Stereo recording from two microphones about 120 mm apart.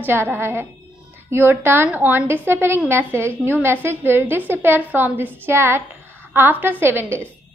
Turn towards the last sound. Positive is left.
turn(degrees=-20)  # may be behind; listen again after turning